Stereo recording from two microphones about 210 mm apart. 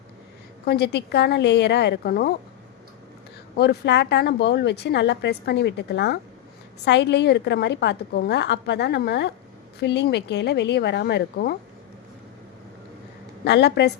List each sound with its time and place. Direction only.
0.6 s a woman's voice: 50° left (ahead or behind)
3.6 s a woman's voice: 55° left (ahead or behind)
13.4 s a woman's voice: 55° left (ahead or behind)